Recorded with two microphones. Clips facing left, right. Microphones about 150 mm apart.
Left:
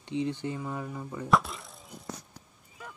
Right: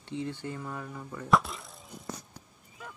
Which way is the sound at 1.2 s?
Centre (ahead or behind).